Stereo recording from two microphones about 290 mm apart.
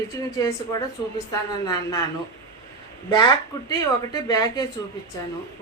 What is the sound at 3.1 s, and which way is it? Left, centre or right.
A woman's voice, centre.